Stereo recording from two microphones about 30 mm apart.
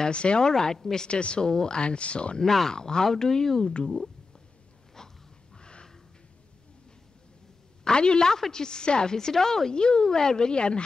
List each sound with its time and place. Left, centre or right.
0.1 s speech: left
0.4 s a woman's voice: centre
1.0 s speech: left
1.5 s a woman's voice: left
1.8 s speech: left
2.7 s a woman's voice: left
3.7 s a woman's voice: left
5.0 s wheeze: centre
5.6 s a sound: left
7.8 s a woman's voice: left